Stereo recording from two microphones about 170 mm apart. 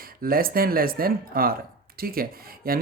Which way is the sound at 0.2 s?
60° right (ahead or behind).